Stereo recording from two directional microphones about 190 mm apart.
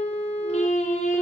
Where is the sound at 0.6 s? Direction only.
40° left (ahead or behind).